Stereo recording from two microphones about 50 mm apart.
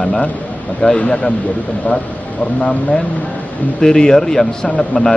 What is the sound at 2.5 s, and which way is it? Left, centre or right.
A man's voice, centre.